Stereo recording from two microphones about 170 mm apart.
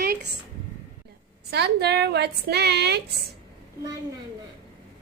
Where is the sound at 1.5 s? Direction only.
75° right (ahead or behind).